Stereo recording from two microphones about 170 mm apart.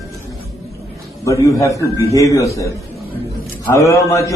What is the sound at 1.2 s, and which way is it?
A man's voice, 20° left (ahead or behind).